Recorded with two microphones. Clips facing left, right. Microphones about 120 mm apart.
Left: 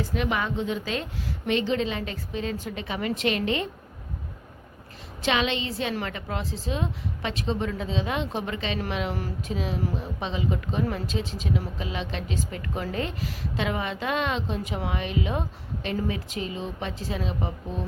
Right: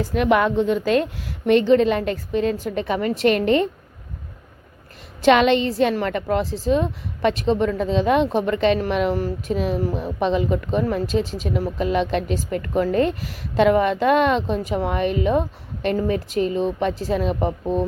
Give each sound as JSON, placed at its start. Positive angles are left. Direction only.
{"t": 0.1, "sound": "a woman's voice", "side_deg": -60}
{"t": 5.2, "sound": "a woman's voice", "side_deg": -55}